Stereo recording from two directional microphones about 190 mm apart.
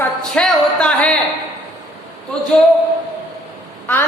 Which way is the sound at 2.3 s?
5° left (ahead or behind).